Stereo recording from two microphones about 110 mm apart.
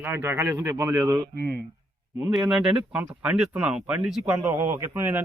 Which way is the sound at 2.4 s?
5° right (ahead or behind).